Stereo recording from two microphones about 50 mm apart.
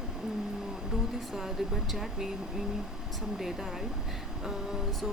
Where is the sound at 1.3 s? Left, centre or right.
Centre.